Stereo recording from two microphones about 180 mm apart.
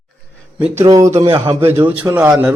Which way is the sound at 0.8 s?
20° right (ahead or behind).